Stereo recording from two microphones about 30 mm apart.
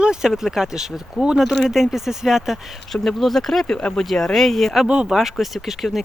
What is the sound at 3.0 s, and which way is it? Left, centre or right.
Speech, centre.